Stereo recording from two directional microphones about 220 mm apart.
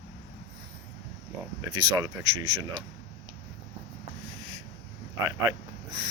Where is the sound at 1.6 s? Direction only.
15° right (ahead or behind).